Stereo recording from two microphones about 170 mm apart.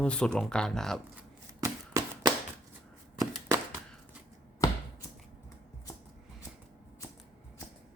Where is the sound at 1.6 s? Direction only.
20° right (ahead or behind).